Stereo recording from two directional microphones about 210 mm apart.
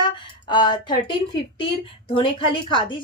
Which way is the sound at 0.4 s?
20° left (ahead or behind).